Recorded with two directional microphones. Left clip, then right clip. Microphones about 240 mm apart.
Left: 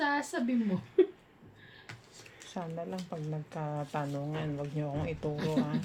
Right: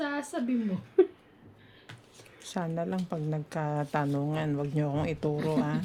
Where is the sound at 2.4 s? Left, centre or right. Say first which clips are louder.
Right 6 dB; right.